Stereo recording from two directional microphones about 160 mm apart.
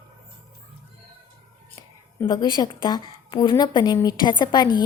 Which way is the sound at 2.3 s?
25° left (ahead or behind).